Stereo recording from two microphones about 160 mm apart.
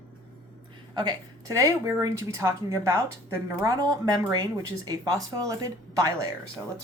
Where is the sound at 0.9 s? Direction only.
25° right (ahead or behind).